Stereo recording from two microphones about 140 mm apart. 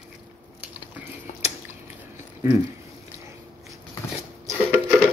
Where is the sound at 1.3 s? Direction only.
55° left (ahead or behind).